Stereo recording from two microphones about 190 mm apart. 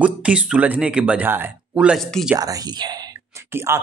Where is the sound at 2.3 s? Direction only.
20° right (ahead or behind).